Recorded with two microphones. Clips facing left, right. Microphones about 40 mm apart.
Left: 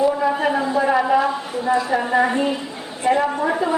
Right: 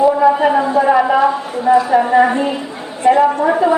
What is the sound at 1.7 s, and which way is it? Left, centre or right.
A woman's voice, centre.